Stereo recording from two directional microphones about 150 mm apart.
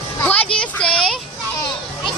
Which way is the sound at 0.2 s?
10° left (ahead or behind).